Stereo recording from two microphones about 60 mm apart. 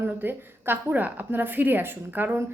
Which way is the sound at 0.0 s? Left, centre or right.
Right.